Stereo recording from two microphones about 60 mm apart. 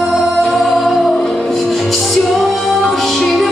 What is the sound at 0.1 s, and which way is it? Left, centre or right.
Music, centre.